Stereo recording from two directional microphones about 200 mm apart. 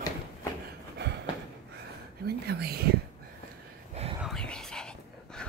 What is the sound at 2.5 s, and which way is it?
Whispering, 50° right (ahead or behind).